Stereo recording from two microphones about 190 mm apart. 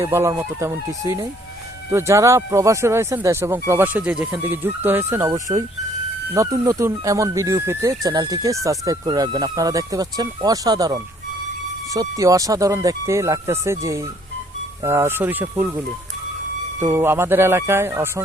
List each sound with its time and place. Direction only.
0.0 s speech: 15° right (ahead or behind)
16.8 s speech: 15° right (ahead or behind)